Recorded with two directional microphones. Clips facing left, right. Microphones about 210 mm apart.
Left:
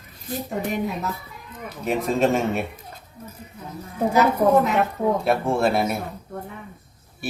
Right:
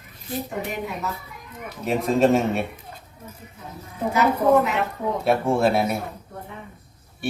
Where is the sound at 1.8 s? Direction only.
Centre (ahead or behind).